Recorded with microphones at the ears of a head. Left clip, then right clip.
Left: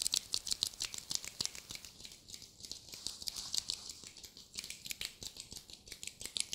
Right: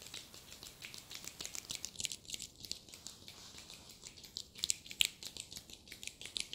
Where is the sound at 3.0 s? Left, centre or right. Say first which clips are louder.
Left 9 dB; left.